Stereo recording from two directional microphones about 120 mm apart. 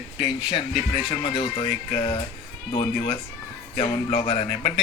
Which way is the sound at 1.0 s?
40° left (ahead or behind).